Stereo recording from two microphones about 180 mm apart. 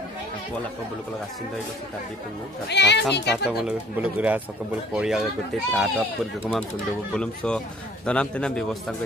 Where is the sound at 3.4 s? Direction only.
5° right (ahead or behind).